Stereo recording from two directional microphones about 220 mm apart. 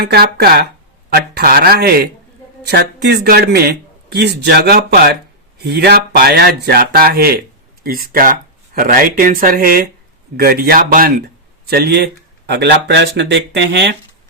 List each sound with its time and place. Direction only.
0.0 s speech: 45° right (ahead or behind)